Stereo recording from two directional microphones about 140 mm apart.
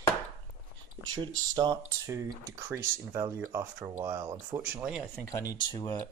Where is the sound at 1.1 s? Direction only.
30° right (ahead or behind).